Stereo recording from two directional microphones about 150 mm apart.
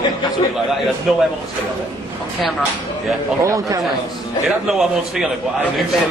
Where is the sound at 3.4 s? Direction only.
20° right (ahead or behind).